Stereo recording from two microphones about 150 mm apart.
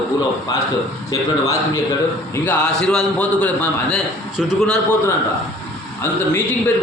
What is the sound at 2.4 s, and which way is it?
A man's voice, 5° left (ahead or behind).